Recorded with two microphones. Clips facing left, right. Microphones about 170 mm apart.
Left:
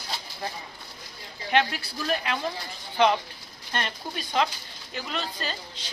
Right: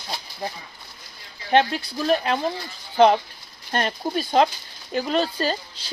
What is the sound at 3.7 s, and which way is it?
Speech, 40° right (ahead or behind).